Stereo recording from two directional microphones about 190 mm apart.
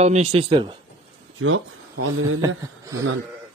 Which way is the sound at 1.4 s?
90° right.